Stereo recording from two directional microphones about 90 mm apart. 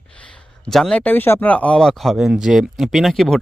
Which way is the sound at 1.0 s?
20° left (ahead or behind).